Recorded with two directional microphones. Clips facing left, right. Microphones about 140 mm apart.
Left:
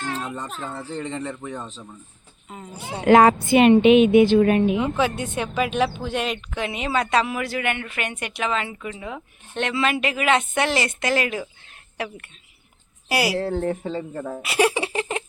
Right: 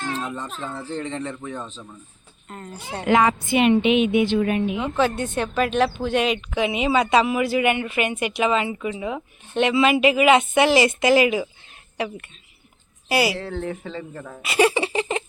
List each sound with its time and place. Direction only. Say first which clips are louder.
0.2 s speech: right 1 dB; 5° left (ahead or behind)
3.1 s a woman's voice: left 5 dB; 45° left (ahead or behind)
4.8 s speech: right 1 dB; 10° left (ahead or behind)
13.3 s speech: left 5 dB; 40° left (ahead or behind)
14.1 s speech: left 6 dB; 25° left (ahead or behind)
14.4 s giggle: right 2 dB; 5° left (ahead or behind)